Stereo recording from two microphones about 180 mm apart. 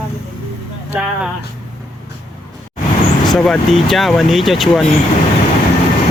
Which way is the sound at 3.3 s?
5° left (ahead or behind).